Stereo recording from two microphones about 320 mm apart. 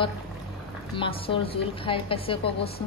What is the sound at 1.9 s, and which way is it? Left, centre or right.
Speech, centre.